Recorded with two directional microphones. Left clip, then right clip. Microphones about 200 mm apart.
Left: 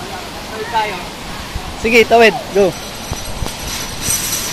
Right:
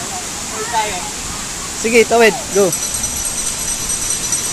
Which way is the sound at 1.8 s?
10° right (ahead or behind).